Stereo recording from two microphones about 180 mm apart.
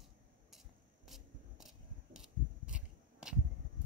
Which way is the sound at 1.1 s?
Centre (ahead or behind).